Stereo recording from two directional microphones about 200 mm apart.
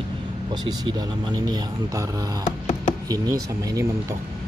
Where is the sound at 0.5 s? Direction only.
20° right (ahead or behind).